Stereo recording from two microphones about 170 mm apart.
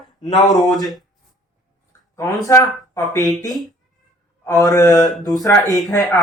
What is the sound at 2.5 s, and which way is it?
Speech, 20° left (ahead or behind).